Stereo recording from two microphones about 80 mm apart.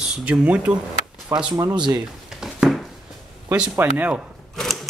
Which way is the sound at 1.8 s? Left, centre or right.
Right.